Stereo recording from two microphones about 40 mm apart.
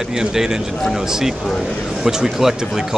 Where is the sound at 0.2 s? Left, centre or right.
Centre.